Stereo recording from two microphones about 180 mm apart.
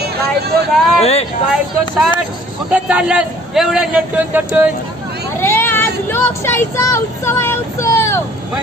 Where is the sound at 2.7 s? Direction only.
5° right (ahead or behind).